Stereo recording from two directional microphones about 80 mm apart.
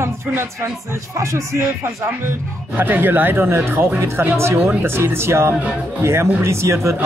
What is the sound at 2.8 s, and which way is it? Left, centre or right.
Speech, right.